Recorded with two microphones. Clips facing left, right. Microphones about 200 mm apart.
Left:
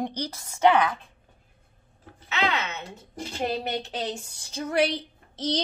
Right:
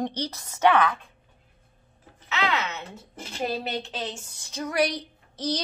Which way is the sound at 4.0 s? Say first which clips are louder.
Left 3 dB; 35° left (ahead or behind).